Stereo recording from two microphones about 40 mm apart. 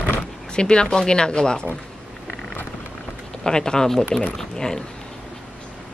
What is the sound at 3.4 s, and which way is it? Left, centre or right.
A woman's voice, centre.